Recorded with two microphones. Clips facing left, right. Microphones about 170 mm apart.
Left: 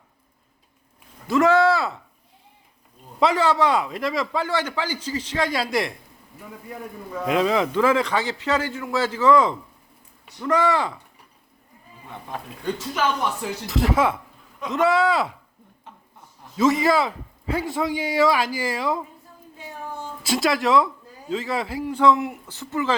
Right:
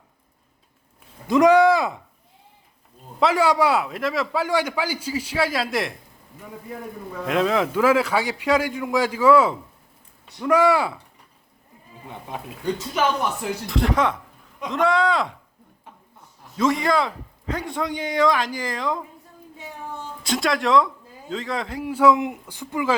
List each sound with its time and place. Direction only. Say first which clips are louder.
1.3 s speech: right 3 dB; 15° right (ahead or behind)
3.2 s a man's voice: right 1 dB; 5° right (ahead or behind)
7.3 s a man's voice: even; centre (ahead or behind)
13.7 s speech: left 1 dB; centre (ahead or behind)
16.6 s speech: left 2 dB; 5° left (ahead or behind)
20.2 s speech: left 1 dB; 5° left (ahead or behind)
21.8 s a man's voice: right 2 dB; 10° right (ahead or behind)